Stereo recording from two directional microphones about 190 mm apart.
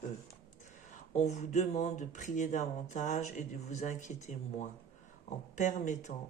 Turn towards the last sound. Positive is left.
turn(degrees=40)  # may be behind; listen again after turning